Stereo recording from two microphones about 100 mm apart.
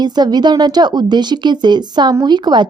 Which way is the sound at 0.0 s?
45° right (ahead or behind).